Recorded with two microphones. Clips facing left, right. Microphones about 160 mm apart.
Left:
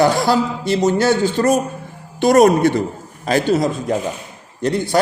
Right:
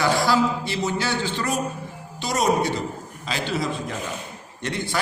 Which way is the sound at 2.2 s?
55° left (ahead or behind).